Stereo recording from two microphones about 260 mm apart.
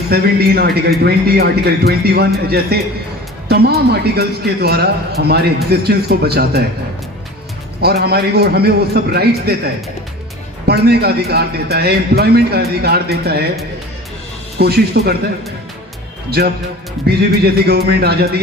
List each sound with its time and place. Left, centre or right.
0.1 s a man's voice: right
7.8 s a man's voice: right
10.7 s a man's voice: right
14.6 s a man's voice: right
16.4 s a man's voice: right